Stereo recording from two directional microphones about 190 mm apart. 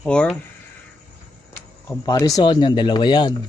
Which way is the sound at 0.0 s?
5° left (ahead or behind).